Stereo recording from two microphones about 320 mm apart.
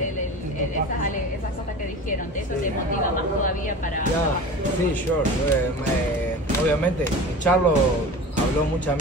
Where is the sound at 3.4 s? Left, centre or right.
Left.